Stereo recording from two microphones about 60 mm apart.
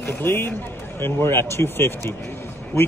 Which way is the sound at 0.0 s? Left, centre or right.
Left.